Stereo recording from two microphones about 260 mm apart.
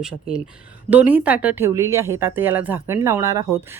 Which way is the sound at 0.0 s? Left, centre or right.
Centre.